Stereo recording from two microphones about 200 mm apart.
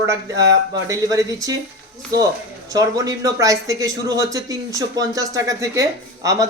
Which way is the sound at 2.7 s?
15° right (ahead or behind).